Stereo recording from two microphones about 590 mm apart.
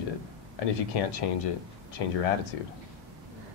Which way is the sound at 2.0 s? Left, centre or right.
Left.